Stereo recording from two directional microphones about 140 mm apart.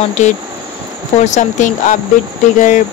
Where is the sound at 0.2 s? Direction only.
55° left (ahead or behind).